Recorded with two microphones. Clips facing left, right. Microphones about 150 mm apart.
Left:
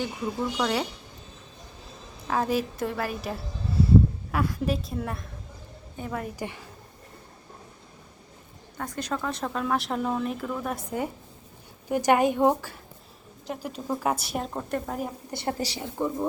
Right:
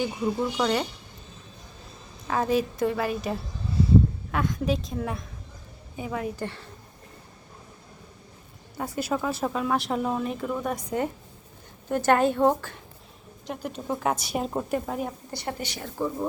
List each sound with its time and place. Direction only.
0.5 s speech: centre (ahead or behind)
2.2 s speech: centre (ahead or behind)
6.4 s a woman's voice: 10° left (ahead or behind)
8.8 s a woman's voice: 10° right (ahead or behind)
15.3 s a woman's voice: 25° left (ahead or behind)
15.8 s a woman's voice: 15° left (ahead or behind)